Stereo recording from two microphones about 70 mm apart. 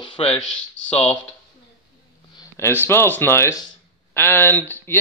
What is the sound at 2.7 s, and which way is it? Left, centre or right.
Speech, left.